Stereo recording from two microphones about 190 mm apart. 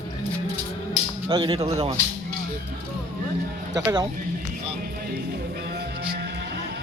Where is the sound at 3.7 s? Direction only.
15° right (ahead or behind).